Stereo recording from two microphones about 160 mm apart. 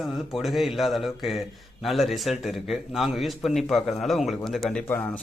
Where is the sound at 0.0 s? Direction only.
Centre (ahead or behind).